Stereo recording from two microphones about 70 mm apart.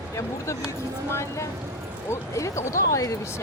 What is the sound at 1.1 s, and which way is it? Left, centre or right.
Speech, left.